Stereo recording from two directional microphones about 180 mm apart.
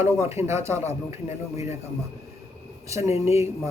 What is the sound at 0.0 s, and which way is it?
Speech, 15° right (ahead or behind).